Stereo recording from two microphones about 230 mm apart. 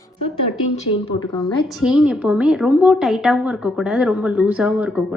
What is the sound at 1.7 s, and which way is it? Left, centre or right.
A woman's voice, centre.